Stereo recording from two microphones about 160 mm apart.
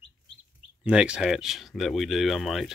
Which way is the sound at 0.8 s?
5° right (ahead or behind).